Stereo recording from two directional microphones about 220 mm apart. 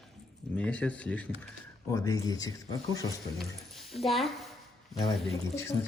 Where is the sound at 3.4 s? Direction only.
Centre (ahead or behind).